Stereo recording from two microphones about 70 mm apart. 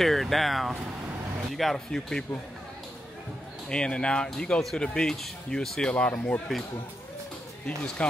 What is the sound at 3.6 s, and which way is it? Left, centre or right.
Speech, centre.